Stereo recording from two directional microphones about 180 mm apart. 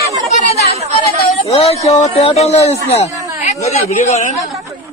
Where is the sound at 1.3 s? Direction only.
35° left (ahead or behind).